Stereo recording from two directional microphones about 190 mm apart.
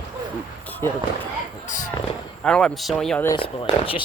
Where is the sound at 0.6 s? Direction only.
10° left (ahead or behind).